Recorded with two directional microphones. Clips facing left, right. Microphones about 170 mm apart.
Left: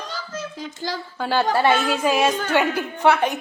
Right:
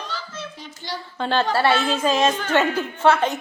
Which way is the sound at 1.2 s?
10° left (ahead or behind).